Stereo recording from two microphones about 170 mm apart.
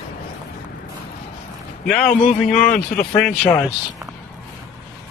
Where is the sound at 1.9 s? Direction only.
5° left (ahead or behind).